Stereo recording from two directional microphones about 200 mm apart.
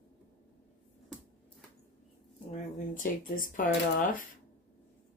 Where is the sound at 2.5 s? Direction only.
40° left (ahead or behind).